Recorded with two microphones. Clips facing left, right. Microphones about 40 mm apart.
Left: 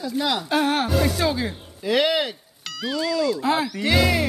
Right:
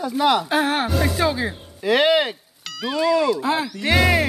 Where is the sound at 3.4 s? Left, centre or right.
Centre.